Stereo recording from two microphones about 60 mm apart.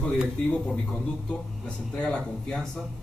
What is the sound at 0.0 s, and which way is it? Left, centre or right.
Speech, centre.